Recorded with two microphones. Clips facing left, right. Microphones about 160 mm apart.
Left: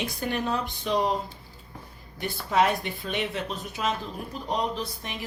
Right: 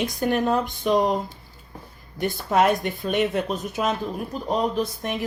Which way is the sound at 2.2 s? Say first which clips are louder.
Right 4 dB; 50° right (ahead or behind).